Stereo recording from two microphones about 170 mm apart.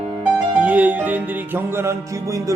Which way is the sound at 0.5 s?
10° right (ahead or behind).